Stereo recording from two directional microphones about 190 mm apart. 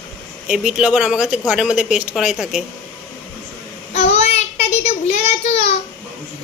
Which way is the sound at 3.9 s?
35° left (ahead or behind).